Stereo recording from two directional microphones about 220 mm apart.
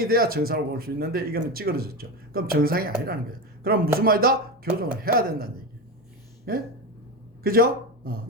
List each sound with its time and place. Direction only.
0.0 s speech: 45° right (ahead or behind)
6.5 s speech: 45° right (ahead or behind)